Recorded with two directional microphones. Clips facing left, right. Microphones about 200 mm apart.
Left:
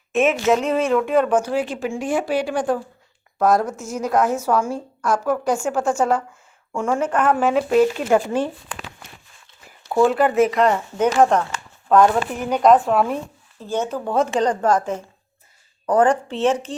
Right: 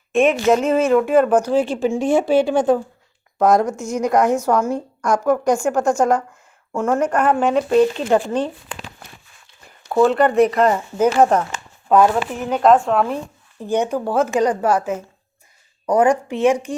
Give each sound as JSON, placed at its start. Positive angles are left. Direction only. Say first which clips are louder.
{"t": 0.1, "sound": "a woman's voice", "louder": "right 2 dB", "side_deg": 0}
{"t": 1.5, "sound": "speech", "louder": "right 5 dB", "side_deg": -30}
{"t": 3.5, "sound": "a woman's voice", "louder": "right 3 dB", "side_deg": 5}
{"t": 6.7, "sound": "a woman's voice", "louder": "right 2 dB", "side_deg": -5}
{"t": 7.3, "sound": "speech", "louder": "right 1 dB", "side_deg": 5}
{"t": 9.9, "sound": "a woman's voice", "louder": "right 2 dB", "side_deg": 0}
{"t": 13.6, "sound": "speech", "louder": "right 4 dB", "side_deg": -15}